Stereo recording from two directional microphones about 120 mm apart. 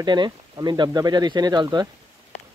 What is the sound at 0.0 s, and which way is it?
Speech, 40° right (ahead or behind).